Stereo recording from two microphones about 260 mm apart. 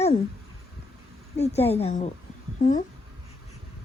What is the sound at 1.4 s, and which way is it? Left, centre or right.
Speech, left.